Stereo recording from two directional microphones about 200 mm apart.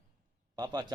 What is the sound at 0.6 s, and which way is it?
Speech, 20° right (ahead or behind).